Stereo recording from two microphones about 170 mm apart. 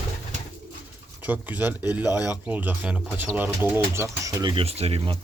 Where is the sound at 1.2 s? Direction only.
10° right (ahead or behind).